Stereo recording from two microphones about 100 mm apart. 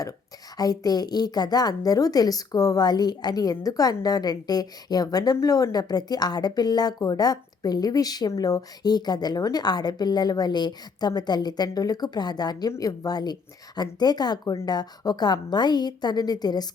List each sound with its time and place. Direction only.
0.5 s a woman's voice: 40° left (ahead or behind)